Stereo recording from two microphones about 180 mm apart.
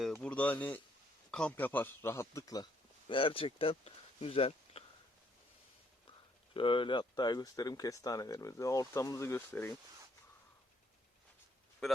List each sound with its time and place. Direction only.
0.0 s a man's voice: 5° left (ahead or behind)
3.1 s speech: 30° left (ahead or behind)
6.1 s speech: 30° left (ahead or behind); by 9.7 s 10° left (ahead or behind)